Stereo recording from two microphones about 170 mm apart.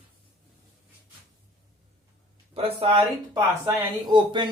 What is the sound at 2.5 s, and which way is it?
Speech, 35° right (ahead or behind).